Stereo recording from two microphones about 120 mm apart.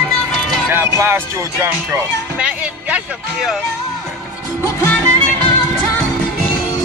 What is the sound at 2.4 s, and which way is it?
Speech, 10° right (ahead or behind).